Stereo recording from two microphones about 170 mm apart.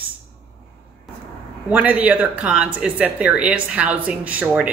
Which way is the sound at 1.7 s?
10° right (ahead or behind).